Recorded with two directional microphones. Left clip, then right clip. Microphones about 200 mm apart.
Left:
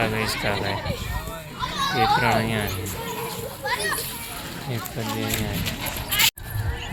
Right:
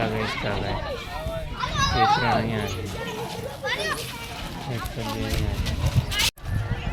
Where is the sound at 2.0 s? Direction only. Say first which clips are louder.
Left 1 dB; 5° left (ahead or behind).